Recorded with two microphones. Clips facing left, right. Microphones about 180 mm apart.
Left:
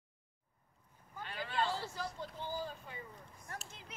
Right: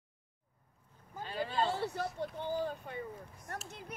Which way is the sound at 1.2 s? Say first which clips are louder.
Right 4 dB; 35° right (ahead or behind).